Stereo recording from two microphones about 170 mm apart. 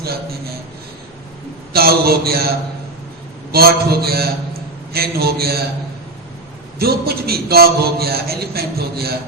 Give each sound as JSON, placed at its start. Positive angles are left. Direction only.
{"t": 1.7, "sound": "a man's voice", "side_deg": -65}
{"t": 6.7, "sound": "a man's voice", "side_deg": -65}